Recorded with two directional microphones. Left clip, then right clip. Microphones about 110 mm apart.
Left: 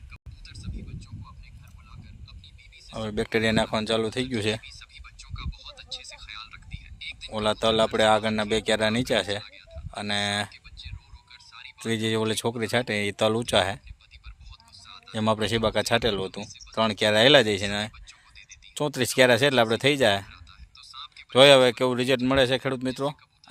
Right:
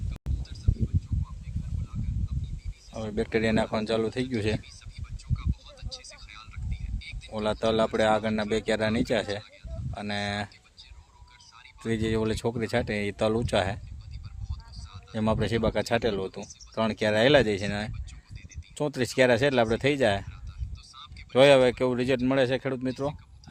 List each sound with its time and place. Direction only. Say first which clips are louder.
2.9 s speech: left 2 dB; 5° left (ahead or behind)
5.4 s a sound: left 3 dB; 30° left (ahead or behind)
7.3 s speech: left 3 dB; 5° left (ahead or behind)
11.8 s speech: left 2 dB; 10° left (ahead or behind)
15.1 s speech: left 3 dB; 5° left (ahead or behind)
20.9 s a sound: left 5 dB; 35° left (ahead or behind)
21.3 s speech: left 3 dB; 10° left (ahead or behind)